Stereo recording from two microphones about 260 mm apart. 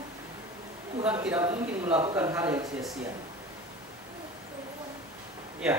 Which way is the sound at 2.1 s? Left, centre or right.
Centre.